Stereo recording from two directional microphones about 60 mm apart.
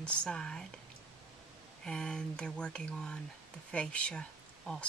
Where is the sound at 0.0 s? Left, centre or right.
Centre.